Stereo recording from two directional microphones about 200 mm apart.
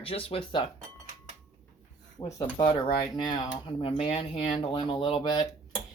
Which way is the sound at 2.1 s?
20° left (ahead or behind).